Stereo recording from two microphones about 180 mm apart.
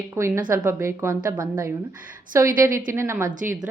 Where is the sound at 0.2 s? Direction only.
15° right (ahead or behind).